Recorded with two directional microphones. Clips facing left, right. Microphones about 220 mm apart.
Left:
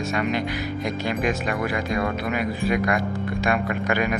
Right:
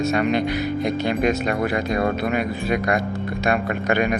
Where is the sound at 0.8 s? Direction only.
30° right (ahead or behind).